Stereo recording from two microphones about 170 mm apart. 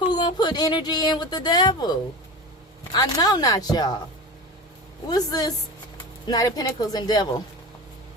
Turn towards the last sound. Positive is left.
turn(degrees=25)  # may be behind; listen again after turning